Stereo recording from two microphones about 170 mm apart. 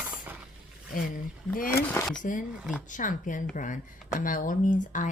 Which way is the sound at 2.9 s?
50° left (ahead or behind).